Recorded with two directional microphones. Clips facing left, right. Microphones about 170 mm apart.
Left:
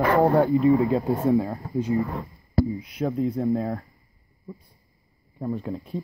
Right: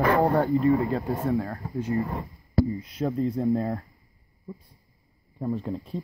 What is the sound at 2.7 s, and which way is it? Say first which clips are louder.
Speech: left 1 dB; centre (ahead or behind).